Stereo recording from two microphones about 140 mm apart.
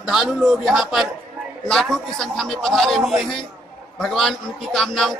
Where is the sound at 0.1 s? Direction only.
5° right (ahead or behind).